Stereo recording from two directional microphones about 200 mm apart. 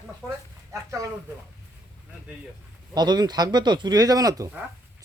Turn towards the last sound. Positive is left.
turn(degrees=-15)  # may be behind; listen again after turning